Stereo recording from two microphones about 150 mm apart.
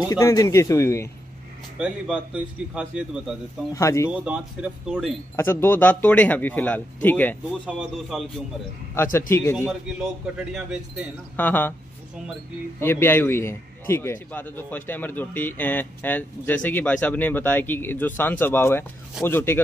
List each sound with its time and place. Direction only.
0.0 s speech: 20° left (ahead or behind)
1.8 s speech: 5° right (ahead or behind)
3.7 s speech: 20° left (ahead or behind)
4.1 s speech: 10° right (ahead or behind)
5.3 s a man's voice: 15° left (ahead or behind)
7.6 s speech: centre (ahead or behind)
9.3 s a man's voice: 20° left (ahead or behind)
10.5 s speech: 5° right (ahead or behind)
11.3 s a man's voice: 10° left (ahead or behind)
12.8 s a man's voice: 15° left (ahead or behind)